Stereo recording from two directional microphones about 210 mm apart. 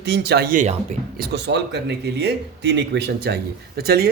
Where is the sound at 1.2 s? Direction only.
55° right (ahead or behind).